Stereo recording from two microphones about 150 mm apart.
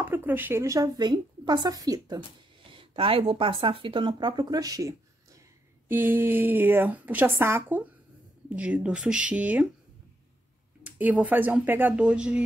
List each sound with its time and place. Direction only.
0.0 s a woman's voice: 15° right (ahead or behind)
2.7 s speech: 35° right (ahead or behind); by 9.7 s 10° right (ahead or behind)
10.8 s speech: 10° right (ahead or behind)